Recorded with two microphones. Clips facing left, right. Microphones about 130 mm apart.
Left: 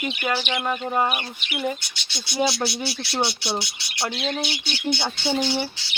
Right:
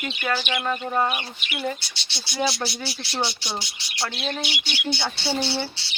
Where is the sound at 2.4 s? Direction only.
20° left (ahead or behind).